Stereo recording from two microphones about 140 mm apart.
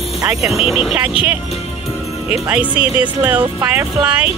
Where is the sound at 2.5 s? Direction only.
10° right (ahead or behind).